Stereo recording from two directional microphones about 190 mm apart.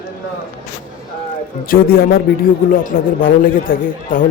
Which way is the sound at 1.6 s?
50° left (ahead or behind).